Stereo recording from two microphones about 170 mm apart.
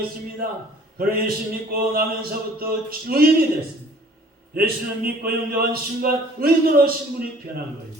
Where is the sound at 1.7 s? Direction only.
60° right (ahead or behind).